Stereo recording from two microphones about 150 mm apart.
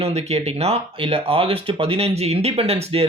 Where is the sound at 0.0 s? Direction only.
45° right (ahead or behind).